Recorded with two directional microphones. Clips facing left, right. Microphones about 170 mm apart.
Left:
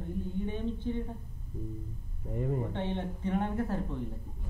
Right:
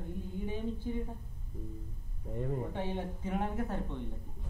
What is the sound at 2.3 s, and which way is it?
Speech, 5° left (ahead or behind).